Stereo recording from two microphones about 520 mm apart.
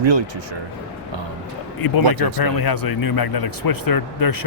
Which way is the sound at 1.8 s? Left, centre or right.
Left.